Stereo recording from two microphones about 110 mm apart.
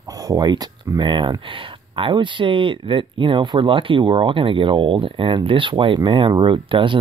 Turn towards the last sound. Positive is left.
turn(degrees=-50)  # may be behind; listen again after turning